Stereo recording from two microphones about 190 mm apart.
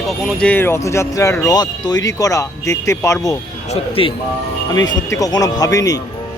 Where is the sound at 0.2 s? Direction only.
5° left (ahead or behind).